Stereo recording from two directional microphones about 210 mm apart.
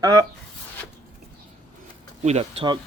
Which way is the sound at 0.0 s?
20° right (ahead or behind).